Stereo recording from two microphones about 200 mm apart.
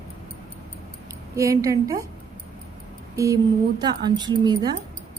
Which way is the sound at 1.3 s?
15° right (ahead or behind).